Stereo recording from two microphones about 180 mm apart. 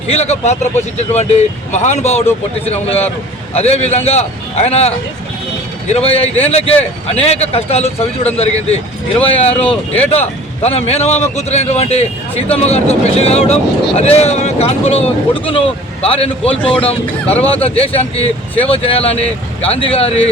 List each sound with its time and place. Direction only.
0.1 s speech: 35° left (ahead or behind)
3.5 s speech: 35° left (ahead or behind)
9.5 s speech: 5° left (ahead or behind)
10.0 s speech: 35° left (ahead or behind)